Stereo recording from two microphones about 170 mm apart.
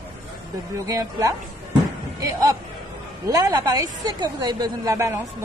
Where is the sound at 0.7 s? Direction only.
20° right (ahead or behind).